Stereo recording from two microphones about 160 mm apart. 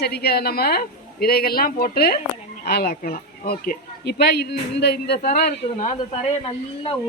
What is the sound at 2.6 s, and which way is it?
A woman's voice, 85° left.